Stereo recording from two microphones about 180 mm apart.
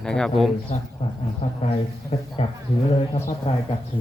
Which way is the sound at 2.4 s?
35° left (ahead or behind).